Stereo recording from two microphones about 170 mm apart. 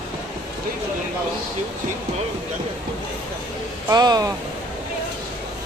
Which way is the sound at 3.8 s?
25° right (ahead or behind).